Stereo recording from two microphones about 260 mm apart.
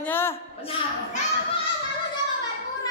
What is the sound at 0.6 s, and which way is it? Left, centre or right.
Speech, left.